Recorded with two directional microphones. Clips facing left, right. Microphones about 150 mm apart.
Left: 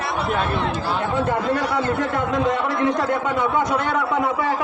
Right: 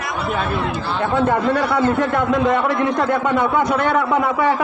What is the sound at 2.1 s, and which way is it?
A man's voice, 65° right (ahead or behind).